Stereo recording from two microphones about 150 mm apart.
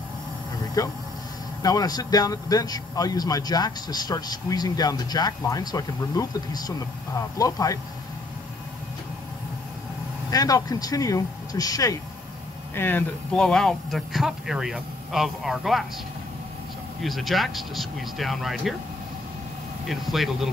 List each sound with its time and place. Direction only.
0.8 s a man's voice: 25° left (ahead or behind)
10.3 s a man's voice: 25° left (ahead or behind)
12.7 s speech: 15° left (ahead or behind)
17.0 s speech: centre (ahead or behind)
19.9 s speech: centre (ahead or behind)